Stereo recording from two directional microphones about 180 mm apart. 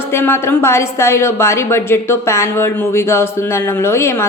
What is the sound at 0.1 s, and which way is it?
A woman's voice, 15° left (ahead or behind).